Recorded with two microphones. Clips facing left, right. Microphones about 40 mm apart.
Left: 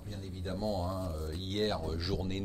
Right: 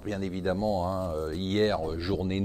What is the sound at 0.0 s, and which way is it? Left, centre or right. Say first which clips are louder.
Speech: right 12 dB; right.